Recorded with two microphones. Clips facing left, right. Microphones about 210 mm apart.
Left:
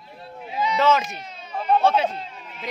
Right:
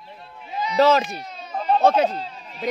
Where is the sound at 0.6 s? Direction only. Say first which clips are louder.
Right 3 dB; 40° right (ahead or behind).